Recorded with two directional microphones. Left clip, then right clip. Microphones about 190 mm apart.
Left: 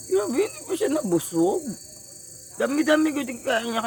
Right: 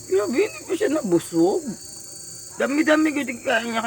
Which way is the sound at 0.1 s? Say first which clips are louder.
Right 2 dB; 20° left (ahead or behind).